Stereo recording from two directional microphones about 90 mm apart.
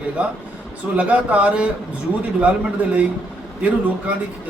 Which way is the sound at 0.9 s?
15° right (ahead or behind).